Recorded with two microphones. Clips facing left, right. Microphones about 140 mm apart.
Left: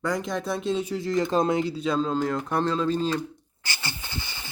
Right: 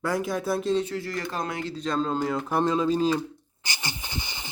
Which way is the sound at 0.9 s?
20° left (ahead or behind).